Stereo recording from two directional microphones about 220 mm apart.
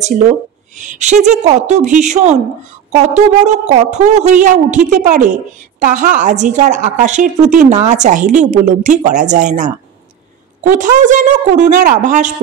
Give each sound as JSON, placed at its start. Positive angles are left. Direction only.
{"t": 0.7, "sound": "a woman's voice", "side_deg": -35}